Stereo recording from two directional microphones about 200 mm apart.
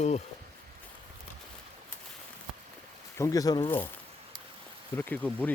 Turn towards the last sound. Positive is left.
turn(degrees=10)  # may be behind; listen again after turning